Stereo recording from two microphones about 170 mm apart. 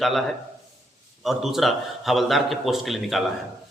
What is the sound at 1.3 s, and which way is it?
A man's voice, centre (ahead or behind).